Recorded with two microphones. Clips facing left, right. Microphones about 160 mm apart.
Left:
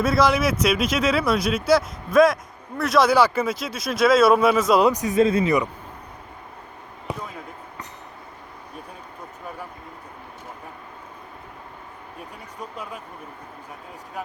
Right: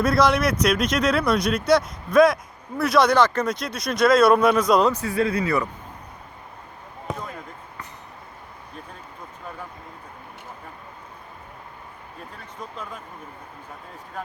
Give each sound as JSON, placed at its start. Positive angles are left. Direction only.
{"t": 0.0, "sound": "speech", "side_deg": 0}
{"t": 4.9, "sound": "speech", "side_deg": 15}
{"t": 7.1, "sound": "basketball bounce", "side_deg": 5}
{"t": 12.5, "sound": "speech", "side_deg": 10}